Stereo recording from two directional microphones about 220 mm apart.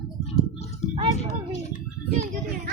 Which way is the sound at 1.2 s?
30° left (ahead or behind).